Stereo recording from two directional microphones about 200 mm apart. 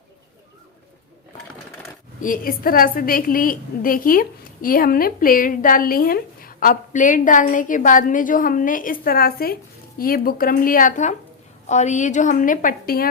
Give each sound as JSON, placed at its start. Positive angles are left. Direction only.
{"t": 2.2, "sound": "a woman's voice", "side_deg": 45}